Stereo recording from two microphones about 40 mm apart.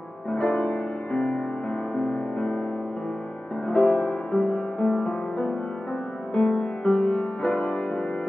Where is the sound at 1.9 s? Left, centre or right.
Left.